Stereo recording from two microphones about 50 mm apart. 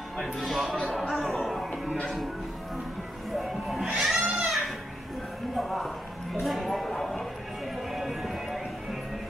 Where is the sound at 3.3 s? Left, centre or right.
Centre.